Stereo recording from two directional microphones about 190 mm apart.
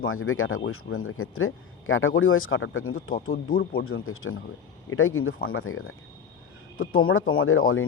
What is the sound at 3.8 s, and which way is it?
Speech, 90° left.